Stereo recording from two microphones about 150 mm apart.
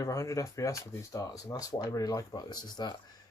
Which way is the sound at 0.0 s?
20° left (ahead or behind).